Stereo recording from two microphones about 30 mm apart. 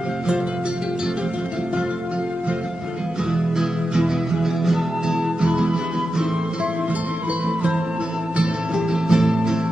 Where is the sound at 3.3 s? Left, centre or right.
Right.